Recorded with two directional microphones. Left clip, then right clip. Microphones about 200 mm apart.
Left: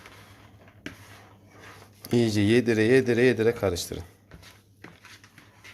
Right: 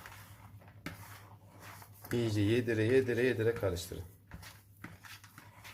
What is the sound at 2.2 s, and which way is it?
A man's voice, 55° left (ahead or behind).